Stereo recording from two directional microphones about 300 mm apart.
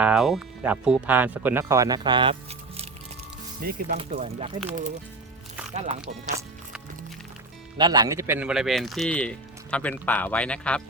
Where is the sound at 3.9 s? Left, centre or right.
Right.